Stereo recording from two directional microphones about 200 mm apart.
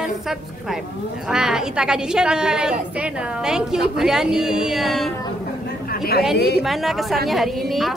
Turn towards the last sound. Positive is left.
turn(degrees=0)  # may be behind; listen again after turning